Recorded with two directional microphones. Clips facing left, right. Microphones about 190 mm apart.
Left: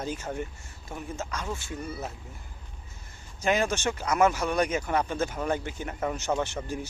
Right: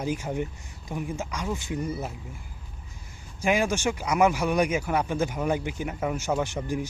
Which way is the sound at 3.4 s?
10° right (ahead or behind).